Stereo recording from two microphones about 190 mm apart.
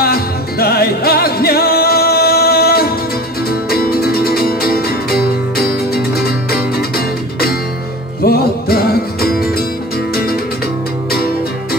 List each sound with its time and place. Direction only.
0.0 s music: 55° left (ahead or behind)
8.2 s music: 55° left (ahead or behind)